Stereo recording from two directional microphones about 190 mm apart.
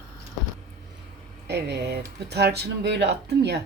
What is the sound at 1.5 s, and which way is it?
Speech, 65° right (ahead or behind).